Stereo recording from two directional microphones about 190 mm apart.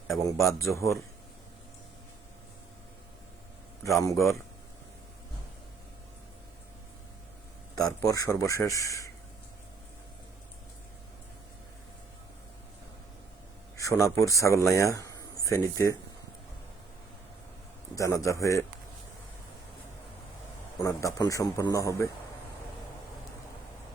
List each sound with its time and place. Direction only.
0.1 s a man's voice: centre (ahead or behind)
0.7 s a man's voice: 15° left (ahead or behind)
3.8 s a man's voice: 15° left (ahead or behind)
8.0 s a man's voice: 15° left (ahead or behind)
13.7 s a man's voice: 15° left (ahead or behind)
17.9 s a man's voice: 15° left (ahead or behind)
20.8 s a man's voice: 15° left (ahead or behind)